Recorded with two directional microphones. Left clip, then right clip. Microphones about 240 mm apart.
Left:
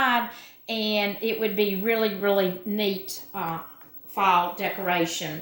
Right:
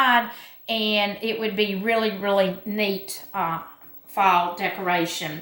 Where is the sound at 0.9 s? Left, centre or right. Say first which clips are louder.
Right 2 dB; right.